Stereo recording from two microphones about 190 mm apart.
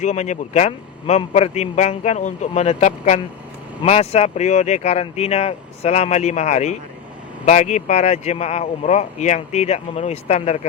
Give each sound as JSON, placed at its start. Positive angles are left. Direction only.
{"t": 0.0, "sound": "speech", "side_deg": 40}